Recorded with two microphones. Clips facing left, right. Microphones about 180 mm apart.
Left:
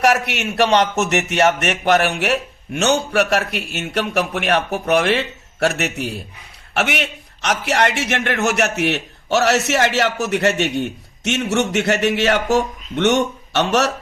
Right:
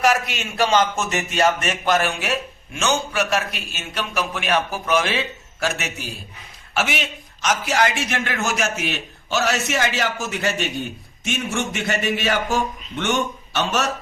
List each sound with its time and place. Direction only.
0.0 s a man's voice: 70° left (ahead or behind)